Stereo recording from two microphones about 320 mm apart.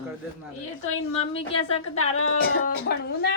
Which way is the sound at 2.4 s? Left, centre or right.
Left.